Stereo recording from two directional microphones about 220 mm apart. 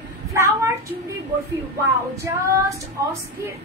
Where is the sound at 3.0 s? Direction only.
15° right (ahead or behind).